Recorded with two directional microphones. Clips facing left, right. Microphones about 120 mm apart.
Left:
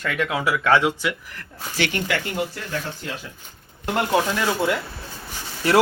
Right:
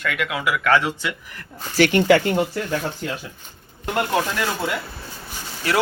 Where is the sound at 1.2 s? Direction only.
Centre (ahead or behind).